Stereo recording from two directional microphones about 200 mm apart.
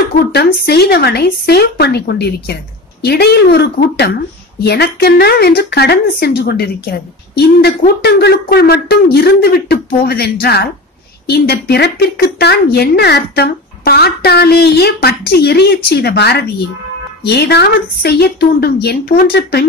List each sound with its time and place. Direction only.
0.3 s a woman's voice: 55° left (ahead or behind)